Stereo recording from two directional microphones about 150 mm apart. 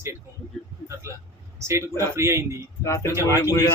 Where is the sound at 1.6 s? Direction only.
20° right (ahead or behind).